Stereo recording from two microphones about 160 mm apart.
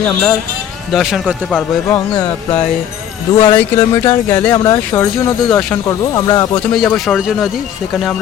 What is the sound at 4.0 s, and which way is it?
Speech, 20° left (ahead or behind).